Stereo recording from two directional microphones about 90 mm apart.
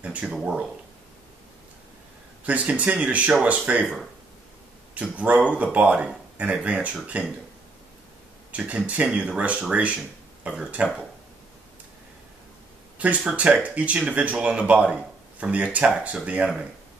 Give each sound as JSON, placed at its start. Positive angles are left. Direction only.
{"t": 0.0, "sound": "speech", "side_deg": -15}
{"t": 2.4, "sound": "speech", "side_deg": -15}
{"t": 4.9, "sound": "speech", "side_deg": -15}
{"t": 8.5, "sound": "speech", "side_deg": -15}
{"t": 13.0, "sound": "speech", "side_deg": -15}